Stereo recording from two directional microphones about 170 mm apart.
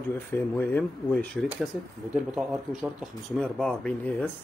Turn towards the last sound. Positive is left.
turn(degrees=5)  # may be behind; listen again after turning